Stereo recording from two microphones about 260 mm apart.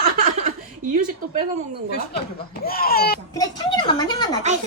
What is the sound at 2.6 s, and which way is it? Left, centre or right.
Speech, left.